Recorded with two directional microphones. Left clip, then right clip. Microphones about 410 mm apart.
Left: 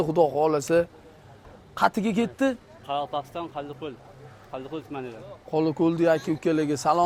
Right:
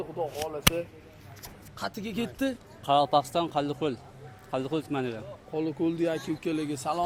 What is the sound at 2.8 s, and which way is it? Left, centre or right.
Speech, right.